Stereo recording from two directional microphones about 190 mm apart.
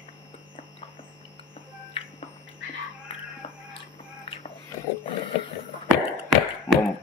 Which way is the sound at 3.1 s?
30° left (ahead or behind).